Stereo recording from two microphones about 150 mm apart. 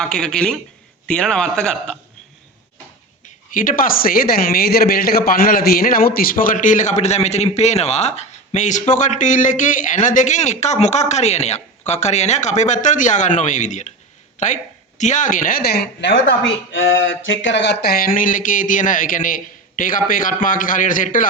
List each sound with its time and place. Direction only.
0.0 s speech: 5° left (ahead or behind)
3.5 s a woman's voice: 65° left (ahead or behind); by 15.9 s 90° left
17.7 s a man's voice: 85° left; by 21.2 s 60° left (ahead or behind)